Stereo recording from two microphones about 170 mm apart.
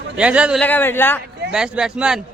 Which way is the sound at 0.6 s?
10° left (ahead or behind).